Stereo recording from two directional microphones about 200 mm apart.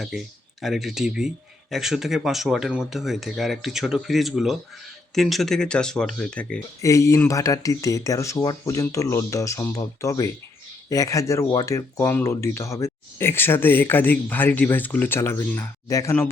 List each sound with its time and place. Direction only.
0.6 s speech: centre (ahead or behind)